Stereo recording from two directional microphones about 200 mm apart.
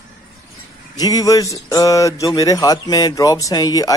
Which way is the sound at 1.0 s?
20° left (ahead or behind).